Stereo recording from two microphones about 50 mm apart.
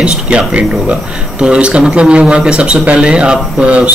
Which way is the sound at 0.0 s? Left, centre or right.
Centre.